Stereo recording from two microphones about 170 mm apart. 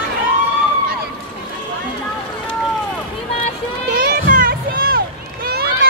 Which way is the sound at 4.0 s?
55° right (ahead or behind).